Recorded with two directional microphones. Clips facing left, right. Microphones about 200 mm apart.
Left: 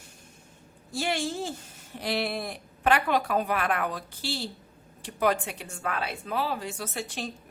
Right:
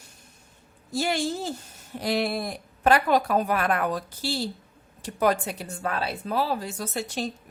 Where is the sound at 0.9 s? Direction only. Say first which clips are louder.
Right 3 dB; 40° right (ahead or behind).